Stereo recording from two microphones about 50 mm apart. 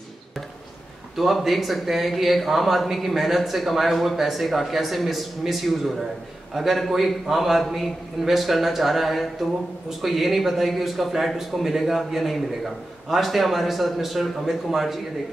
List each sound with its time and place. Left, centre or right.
1.1 s a man's voice: centre